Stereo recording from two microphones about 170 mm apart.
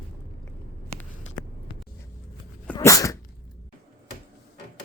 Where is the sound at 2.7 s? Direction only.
20° left (ahead or behind).